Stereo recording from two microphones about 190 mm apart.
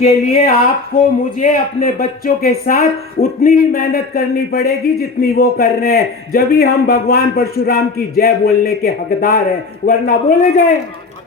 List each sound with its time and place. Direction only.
0.0 s speech: 35° left (ahead or behind)
1.4 s speech: 45° left (ahead or behind)